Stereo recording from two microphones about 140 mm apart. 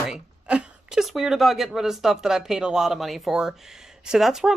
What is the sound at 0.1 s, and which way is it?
A woman's voice, 5° right (ahead or behind).